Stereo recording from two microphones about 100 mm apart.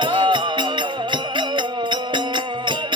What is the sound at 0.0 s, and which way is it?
Music, 55° right (ahead or behind).